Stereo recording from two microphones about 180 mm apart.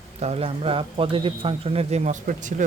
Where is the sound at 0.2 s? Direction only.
35° right (ahead or behind).